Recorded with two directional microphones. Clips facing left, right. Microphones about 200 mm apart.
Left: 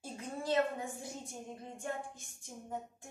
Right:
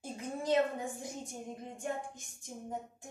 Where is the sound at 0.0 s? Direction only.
20° right (ahead or behind).